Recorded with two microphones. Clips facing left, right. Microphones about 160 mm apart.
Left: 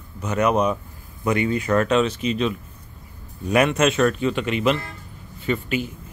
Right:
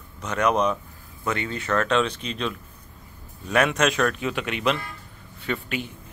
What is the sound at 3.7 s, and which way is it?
Speech, 5° left (ahead or behind).